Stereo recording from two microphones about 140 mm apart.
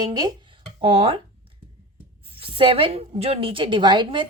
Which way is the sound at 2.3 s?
40° right (ahead or behind).